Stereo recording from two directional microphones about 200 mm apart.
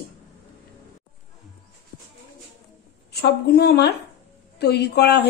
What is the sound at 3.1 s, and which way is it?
A woman's voice, 55° left (ahead or behind).